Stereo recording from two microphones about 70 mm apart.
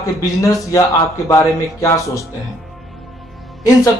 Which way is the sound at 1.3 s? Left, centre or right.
Left.